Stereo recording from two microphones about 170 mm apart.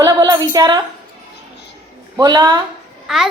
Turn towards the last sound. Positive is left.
turn(degrees=-5)  # may be behind; listen again after turning